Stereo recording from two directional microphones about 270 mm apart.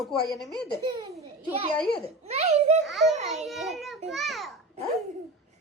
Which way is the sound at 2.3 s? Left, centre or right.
Right.